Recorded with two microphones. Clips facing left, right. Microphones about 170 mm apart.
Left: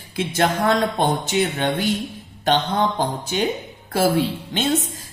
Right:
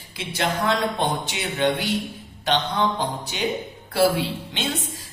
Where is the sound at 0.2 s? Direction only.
50° left (ahead or behind).